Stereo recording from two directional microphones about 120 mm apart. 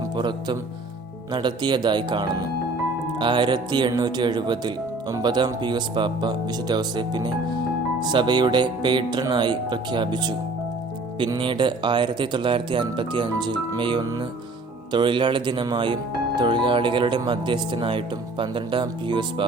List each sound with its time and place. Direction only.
0.2 s speech: 40° right (ahead or behind)
11.3 s speech: 45° right (ahead or behind)